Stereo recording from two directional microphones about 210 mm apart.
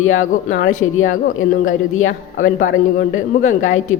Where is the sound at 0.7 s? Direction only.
75° left (ahead or behind).